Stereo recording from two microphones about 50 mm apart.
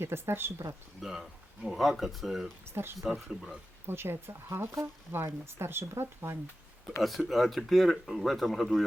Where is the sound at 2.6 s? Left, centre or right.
Right.